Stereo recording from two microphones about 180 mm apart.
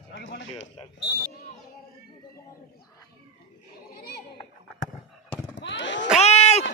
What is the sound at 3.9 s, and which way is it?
Children playing, 65° left (ahead or behind).